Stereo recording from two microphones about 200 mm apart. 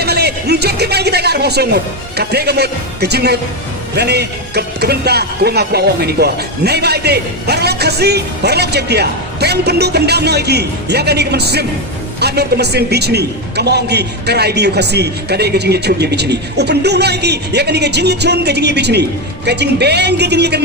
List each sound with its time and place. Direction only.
0.0 s speech: 55° right (ahead or behind)